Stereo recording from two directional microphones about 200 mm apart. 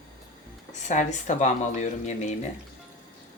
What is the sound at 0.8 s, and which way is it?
Speech, 35° left (ahead or behind).